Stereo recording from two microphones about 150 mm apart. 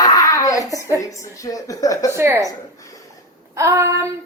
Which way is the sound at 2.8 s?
20° left (ahead or behind).